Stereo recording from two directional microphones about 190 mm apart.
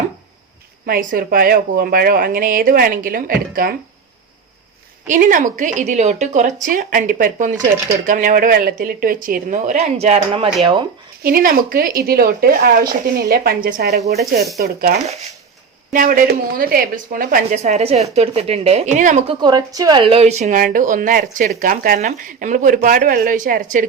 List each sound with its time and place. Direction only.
0.9 s a woman's voice: 50° right (ahead or behind)
5.0 s a woman's voice: 40° right (ahead or behind); by 10.8 s 25° right (ahead or behind)
11.2 s a woman's voice: 50° right (ahead or behind)
19.3 s a woman's voice: 25° right (ahead or behind); by 23.8 s 45° right (ahead or behind)